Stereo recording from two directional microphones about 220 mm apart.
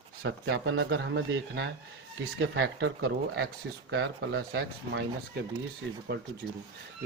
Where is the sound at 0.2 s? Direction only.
55° right (ahead or behind).